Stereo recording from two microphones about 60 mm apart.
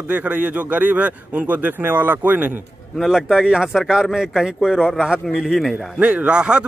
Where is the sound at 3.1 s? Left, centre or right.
Centre.